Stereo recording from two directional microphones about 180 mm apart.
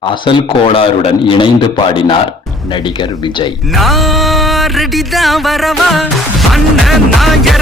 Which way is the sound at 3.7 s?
Centre (ahead or behind).